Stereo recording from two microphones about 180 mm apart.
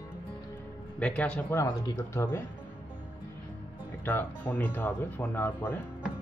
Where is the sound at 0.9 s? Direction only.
5° left (ahead or behind).